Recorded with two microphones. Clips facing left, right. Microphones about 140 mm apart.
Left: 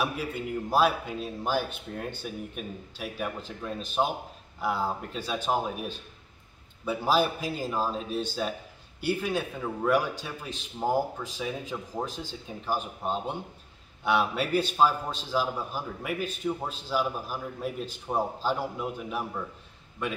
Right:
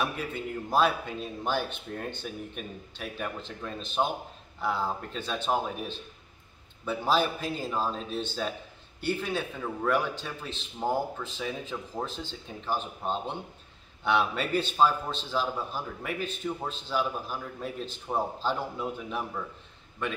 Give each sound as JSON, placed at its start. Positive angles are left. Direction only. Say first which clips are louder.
{"t": 0.0, "sound": "a man's voice", "louder": "left 1 dB", "side_deg": 10}